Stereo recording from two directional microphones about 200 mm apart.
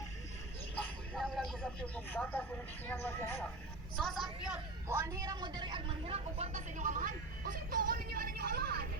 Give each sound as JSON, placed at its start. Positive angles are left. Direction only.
{"t": 1.1, "sound": "speech", "side_deg": 5}
{"t": 3.9, "sound": "a woman's voice", "side_deg": 0}
{"t": 4.9, "sound": "a woman's voice", "side_deg": -15}